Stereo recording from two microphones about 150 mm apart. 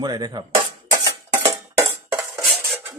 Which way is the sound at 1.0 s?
25° right (ahead or behind).